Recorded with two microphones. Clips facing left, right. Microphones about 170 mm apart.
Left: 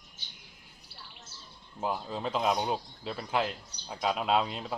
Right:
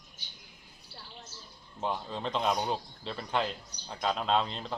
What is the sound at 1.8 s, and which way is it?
Speech, 5° left (ahead or behind).